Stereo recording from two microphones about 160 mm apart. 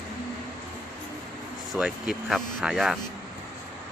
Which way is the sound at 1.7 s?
5° right (ahead or behind).